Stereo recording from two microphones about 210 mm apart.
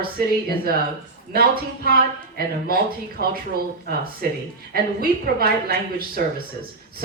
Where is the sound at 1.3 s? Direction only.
45° right (ahead or behind).